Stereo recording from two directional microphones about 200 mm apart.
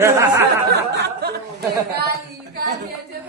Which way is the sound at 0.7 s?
55° right (ahead or behind).